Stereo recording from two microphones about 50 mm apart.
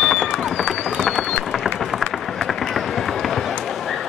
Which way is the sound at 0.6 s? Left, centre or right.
Centre.